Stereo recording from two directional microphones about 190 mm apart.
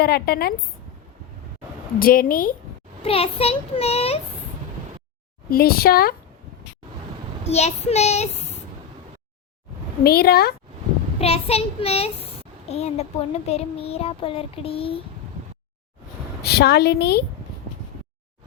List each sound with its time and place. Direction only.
0.0 s a woman's voice: 55° left (ahead or behind)
2.0 s speech: 50° left (ahead or behind)
3.0 s a child's voice: 30° left (ahead or behind)
5.5 s speech: 50° left (ahead or behind)
7.4 s a child's voice: 35° left (ahead or behind)
10.0 s speech: 55° left (ahead or behind)
11.2 s a child's voice: 30° left (ahead or behind)
13.5 s child singing: 30° left (ahead or behind)
16.4 s a woman's voice: 60° left (ahead or behind)